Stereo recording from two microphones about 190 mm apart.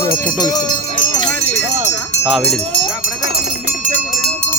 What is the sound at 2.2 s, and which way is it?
Speech, centre (ahead or behind).